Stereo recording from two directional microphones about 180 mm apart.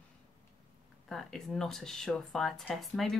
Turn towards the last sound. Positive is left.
turn(degrees=0)  # may be behind; listen again after turning